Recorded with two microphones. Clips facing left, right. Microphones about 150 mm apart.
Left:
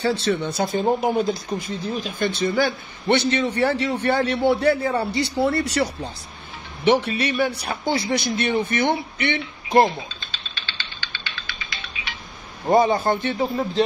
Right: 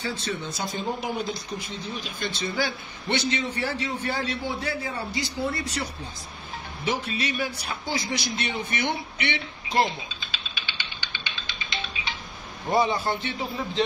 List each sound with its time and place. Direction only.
0.0 s a man's voice: 75° left (ahead or behind); by 9.8 s 50° left (ahead or behind)
10.0 s music: 10° right (ahead or behind)
12.6 s a man's voice: 50° left (ahead or behind)